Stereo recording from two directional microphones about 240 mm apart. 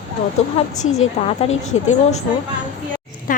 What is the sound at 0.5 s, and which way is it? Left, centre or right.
Speech, left.